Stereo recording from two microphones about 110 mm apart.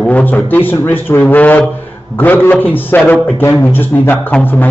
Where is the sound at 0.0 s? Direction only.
15° left (ahead or behind).